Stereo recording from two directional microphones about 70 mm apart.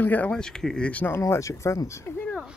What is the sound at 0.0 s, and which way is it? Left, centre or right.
Speech, left.